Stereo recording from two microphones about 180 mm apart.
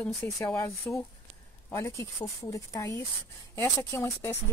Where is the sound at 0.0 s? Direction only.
10° left (ahead or behind).